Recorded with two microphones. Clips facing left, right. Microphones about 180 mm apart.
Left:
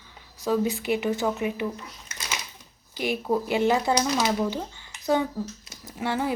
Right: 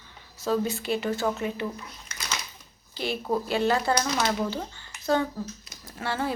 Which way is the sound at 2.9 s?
15° left (ahead or behind).